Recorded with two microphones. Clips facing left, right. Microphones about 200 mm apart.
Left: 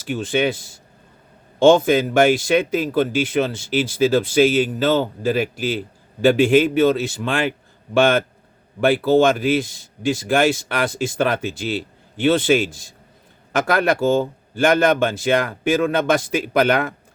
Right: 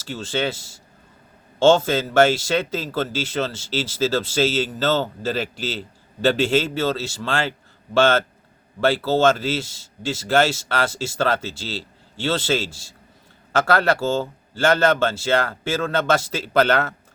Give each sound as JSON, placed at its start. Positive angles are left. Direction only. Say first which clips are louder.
{"t": 0.0, "sound": "a man's voice", "louder": "left 5 dB", "side_deg": 15}